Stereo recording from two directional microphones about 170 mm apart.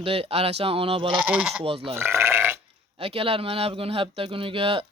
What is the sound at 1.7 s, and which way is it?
Speech, 35° right (ahead or behind).